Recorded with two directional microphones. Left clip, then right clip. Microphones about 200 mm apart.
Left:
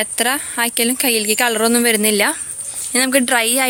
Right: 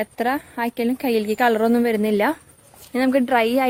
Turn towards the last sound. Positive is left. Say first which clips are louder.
# left 2 dB
turn(degrees=0)  # may be behind; listen again after turning